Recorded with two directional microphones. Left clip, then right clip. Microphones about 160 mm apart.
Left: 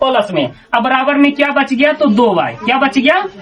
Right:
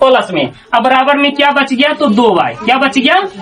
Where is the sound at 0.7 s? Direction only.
25° right (ahead or behind).